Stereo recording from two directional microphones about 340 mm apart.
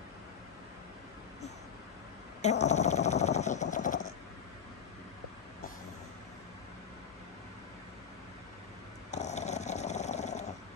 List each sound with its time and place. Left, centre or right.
2.6 s vehicle: centre
3.6 s a sound: left
9.1 s dog: centre